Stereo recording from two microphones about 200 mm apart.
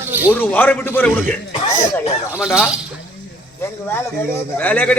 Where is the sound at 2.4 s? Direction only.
5° right (ahead or behind).